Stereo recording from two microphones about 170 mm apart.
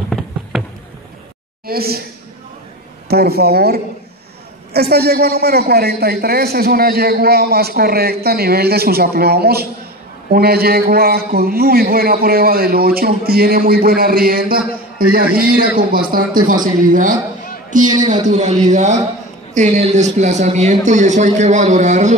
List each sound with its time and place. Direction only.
1.7 s a man's voice: 65° right (ahead or behind)
3.1 s a man's voice: 65° right (ahead or behind); by 22.1 s 45° right (ahead or behind)